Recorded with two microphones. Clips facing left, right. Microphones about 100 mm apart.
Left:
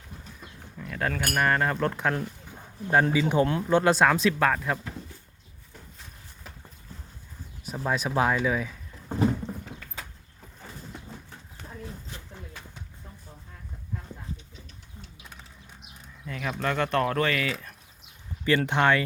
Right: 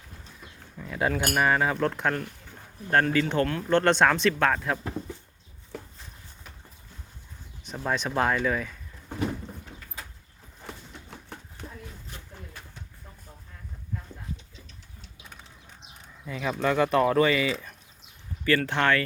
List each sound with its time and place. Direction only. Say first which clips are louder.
0.8 s cutlery: right 3 dB; 10° right (ahead or behind)
1.3 s speech: left 1 dB; 5° right (ahead or behind)
2.2 s speech: left 4 dB; 15° left (ahead or behind)
5.7 s walk: right 10 dB; 90° right
7.6 s speech: left 1 dB; 5° left (ahead or behind)
9.0 s a sound: left 5 dB; 30° left (ahead or behind)
11.3 s a sound: right 4 dB; 70° right (ahead or behind)
16.2 s speech: right 3 dB; 5° right (ahead or behind)
18.4 s speech: left 1 dB; 20° left (ahead or behind)